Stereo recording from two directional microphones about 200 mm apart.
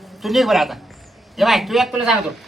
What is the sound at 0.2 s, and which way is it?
Speech, centre (ahead or behind).